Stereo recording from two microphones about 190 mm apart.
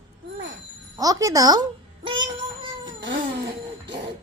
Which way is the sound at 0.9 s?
20° right (ahead or behind).